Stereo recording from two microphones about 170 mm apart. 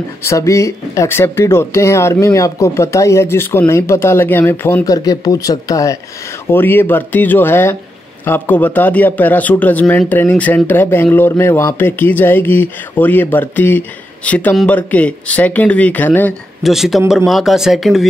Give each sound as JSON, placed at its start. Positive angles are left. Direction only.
{"t": 0.2, "sound": "a man's voice", "side_deg": 15}
{"t": 16.6, "sound": "speech", "side_deg": 0}